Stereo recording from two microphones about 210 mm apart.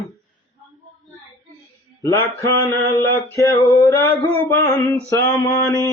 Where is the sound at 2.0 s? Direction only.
15° left (ahead or behind).